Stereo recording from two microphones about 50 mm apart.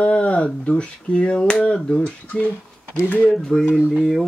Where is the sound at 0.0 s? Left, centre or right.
Left.